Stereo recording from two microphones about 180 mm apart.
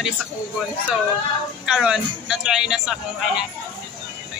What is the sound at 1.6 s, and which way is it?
A man's voice, 5° right (ahead or behind).